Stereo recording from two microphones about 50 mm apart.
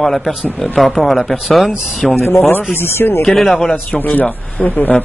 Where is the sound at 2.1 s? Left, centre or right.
Left.